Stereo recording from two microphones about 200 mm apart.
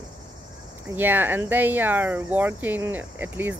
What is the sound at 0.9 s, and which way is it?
Speech, 10° right (ahead or behind).